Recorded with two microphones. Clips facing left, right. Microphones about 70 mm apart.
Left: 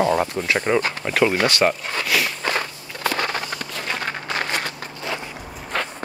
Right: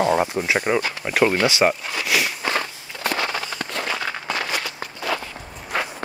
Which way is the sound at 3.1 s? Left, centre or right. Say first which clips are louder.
Right 1 dB; left.